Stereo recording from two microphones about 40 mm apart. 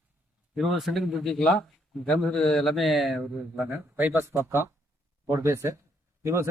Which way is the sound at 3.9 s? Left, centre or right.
Right.